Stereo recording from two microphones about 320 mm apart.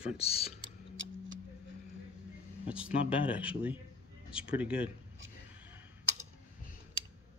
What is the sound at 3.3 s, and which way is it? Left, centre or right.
Speech, centre.